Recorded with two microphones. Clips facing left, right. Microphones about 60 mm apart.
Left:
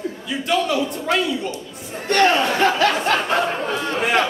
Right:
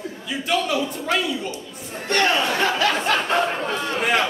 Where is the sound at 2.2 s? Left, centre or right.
Centre.